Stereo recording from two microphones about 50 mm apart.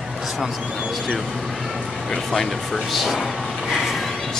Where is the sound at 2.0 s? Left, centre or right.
Centre.